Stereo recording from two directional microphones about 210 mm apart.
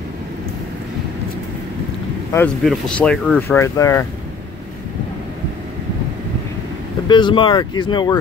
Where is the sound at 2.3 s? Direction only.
5° left (ahead or behind).